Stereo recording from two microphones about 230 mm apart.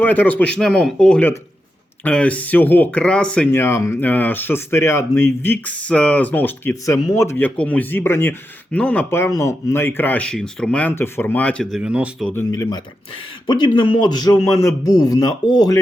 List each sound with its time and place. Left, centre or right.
0.0 s speech: centre
12.3 s speech: centre